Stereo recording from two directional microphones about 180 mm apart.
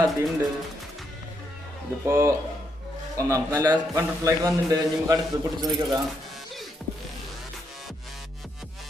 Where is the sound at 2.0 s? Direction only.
15° right (ahead or behind).